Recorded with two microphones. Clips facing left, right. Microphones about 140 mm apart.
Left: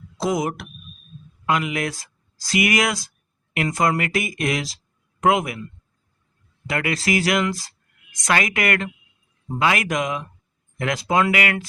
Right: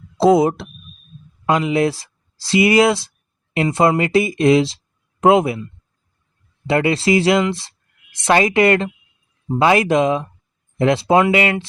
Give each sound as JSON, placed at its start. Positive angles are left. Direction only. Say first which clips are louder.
{"t": 0.2, "sound": "speech", "louder": "right 10 dB", "side_deg": -30}
{"t": 6.7, "sound": "speech", "louder": "right 7 dB", "side_deg": -30}